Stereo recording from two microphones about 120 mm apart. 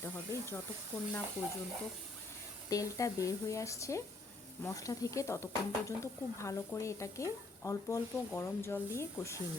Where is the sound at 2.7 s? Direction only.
25° left (ahead or behind).